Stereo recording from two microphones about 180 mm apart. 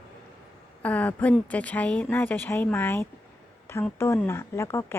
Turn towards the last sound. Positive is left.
turn(degrees=15)  # may be behind; listen again after turning